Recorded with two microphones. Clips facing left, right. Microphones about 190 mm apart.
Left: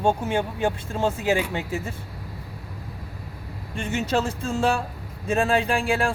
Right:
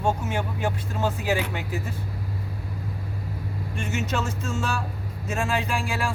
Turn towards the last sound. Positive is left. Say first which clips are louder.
# left 5 dB
turn(degrees=30)  # may be behind; listen again after turning